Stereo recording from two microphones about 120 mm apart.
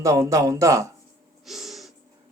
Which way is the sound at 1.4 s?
Centre (ahead or behind).